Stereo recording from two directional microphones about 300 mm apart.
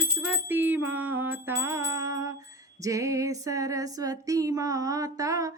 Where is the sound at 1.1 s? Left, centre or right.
Right.